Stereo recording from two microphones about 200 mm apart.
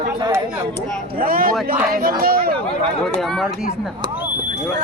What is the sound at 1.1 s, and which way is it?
Speech, 45° right (ahead or behind).